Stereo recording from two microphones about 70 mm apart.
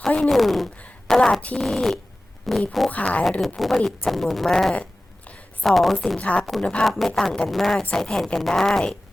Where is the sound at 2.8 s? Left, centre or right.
Centre.